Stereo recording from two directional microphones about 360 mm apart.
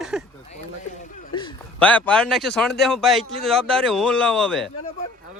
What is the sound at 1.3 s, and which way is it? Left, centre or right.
A man's voice, centre.